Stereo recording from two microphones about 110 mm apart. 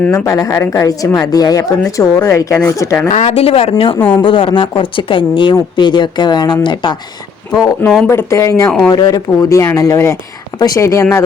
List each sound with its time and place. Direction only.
0.1 s a woman's voice: 30° left (ahead or behind)
3.1 s speech: 80° left; by 3.9 s 60° left (ahead or behind)
4.1 s a woman's voice: 50° left (ahead or behind)
8.0 s speech: 25° left (ahead or behind)
8.6 s speech: 5° left (ahead or behind)
8.9 s a woman's voice: 35° left (ahead or behind)